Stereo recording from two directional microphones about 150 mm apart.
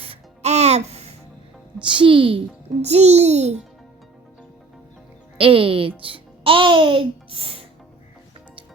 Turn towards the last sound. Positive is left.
turn(degrees=-40)  # may be behind; listen again after turning